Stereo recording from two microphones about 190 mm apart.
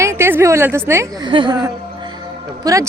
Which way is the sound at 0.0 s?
15° right (ahead or behind).